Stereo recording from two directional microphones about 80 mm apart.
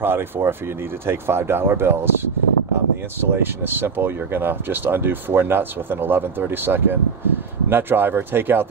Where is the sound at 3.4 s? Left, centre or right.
Right.